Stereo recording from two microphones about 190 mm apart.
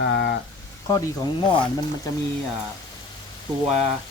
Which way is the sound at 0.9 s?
20° left (ahead or behind).